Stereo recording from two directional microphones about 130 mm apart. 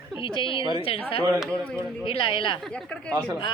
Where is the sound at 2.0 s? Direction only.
45° left (ahead or behind).